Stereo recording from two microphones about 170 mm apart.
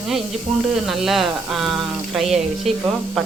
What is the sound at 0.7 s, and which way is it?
Speech, centre (ahead or behind).